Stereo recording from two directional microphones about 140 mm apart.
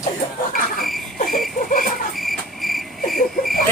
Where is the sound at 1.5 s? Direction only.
85° left.